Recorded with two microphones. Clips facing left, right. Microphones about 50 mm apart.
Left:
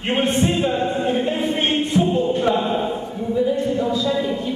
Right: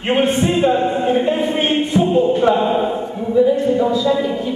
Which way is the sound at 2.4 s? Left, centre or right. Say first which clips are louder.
Right 5 dB; centre.